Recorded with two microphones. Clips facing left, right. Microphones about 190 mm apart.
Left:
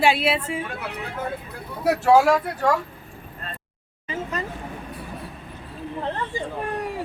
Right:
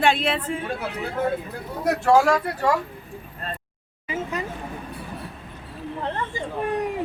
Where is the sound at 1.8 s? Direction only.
5° left (ahead or behind).